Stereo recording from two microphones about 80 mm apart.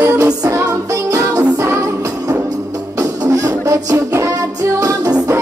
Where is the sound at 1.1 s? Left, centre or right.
Right.